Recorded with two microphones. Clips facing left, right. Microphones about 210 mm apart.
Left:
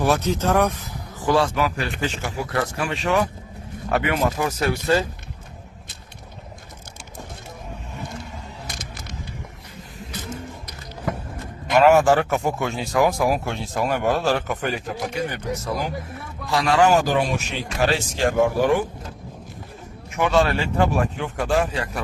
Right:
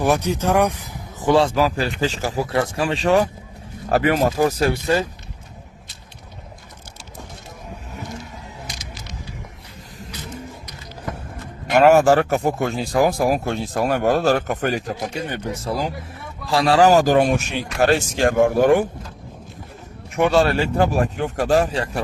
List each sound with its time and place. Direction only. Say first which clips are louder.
0.0 s speech: right 1 dB; 15° right (ahead or behind); by 4.8 s 30° right (ahead or behind)
8.6 s vehicle: even; 55° left (ahead or behind)
10.1 s roaring cats: left 3 dB; 50° left (ahead or behind)
11.8 s speech: right 2 dB; 40° right (ahead or behind)
15.1 s speech: even; 30° right (ahead or behind); by 18.9 s 50° right (ahead or behind)
20.1 s speech: right 3 dB; 35° right (ahead or behind)